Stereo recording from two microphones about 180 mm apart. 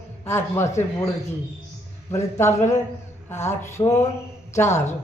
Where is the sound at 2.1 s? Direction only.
15° left (ahead or behind).